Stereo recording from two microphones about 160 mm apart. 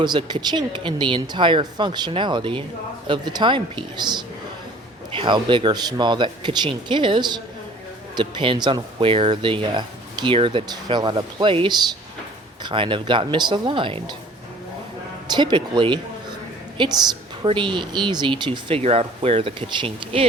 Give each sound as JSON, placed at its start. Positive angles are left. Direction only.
{"t": 0.0, "sound": "speech", "side_deg": -30}
{"t": 15.3, "sound": "speech", "side_deg": -30}